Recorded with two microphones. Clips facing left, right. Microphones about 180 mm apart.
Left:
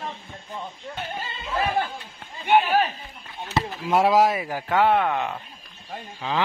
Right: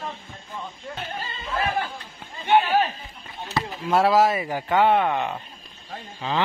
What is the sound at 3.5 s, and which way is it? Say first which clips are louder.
Chop: even; 15° left (ahead or behind).